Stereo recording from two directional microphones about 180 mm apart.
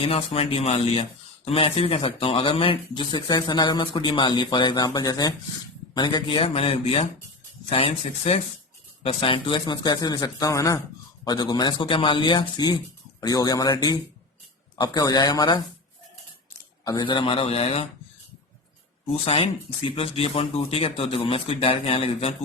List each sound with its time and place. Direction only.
0.0 s speech: 30° left (ahead or behind)
16.8 s speech: 25° left (ahead or behind)
19.2 s speech: 30° left (ahead or behind)